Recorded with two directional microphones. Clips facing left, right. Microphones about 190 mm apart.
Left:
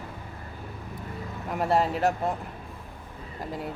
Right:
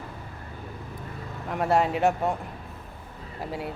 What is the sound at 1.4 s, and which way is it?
Speech, centre (ahead or behind).